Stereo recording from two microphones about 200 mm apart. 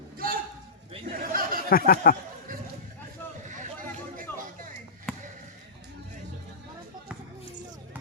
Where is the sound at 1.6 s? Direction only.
45° left (ahead or behind).